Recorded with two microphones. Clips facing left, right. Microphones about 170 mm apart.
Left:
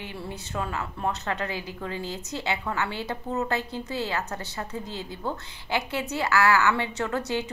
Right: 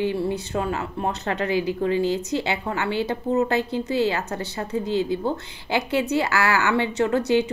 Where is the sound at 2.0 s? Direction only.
85° right.